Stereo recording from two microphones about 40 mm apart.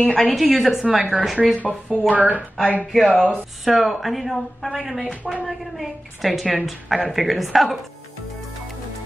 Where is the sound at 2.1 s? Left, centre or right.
Right.